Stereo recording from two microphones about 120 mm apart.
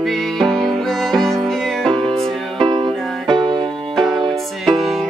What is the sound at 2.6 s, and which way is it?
Music, 45° right (ahead or behind).